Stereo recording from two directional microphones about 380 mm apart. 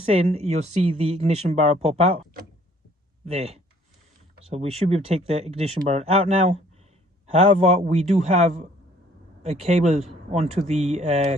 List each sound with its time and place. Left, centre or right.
0.1 s speech: centre
3.2 s speech: centre